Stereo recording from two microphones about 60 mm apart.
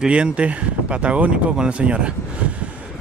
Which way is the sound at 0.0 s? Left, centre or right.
Centre.